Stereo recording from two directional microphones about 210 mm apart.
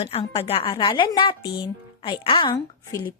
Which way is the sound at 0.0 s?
30° left (ahead or behind).